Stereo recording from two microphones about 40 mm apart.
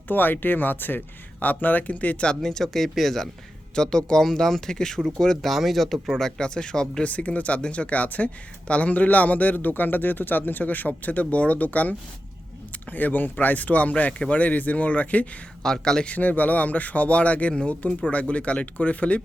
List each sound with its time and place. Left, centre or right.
0.1 s speech: left
1.4 s speech: left
2.4 s speech: centre
3.8 s speech: centre
5.5 s speech: centre
6.4 s speech: left
7.0 s speech: left
15.6 s speech: centre
16.0 s speech: left